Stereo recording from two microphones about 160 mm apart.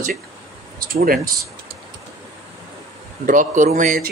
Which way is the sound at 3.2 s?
55° right (ahead or behind).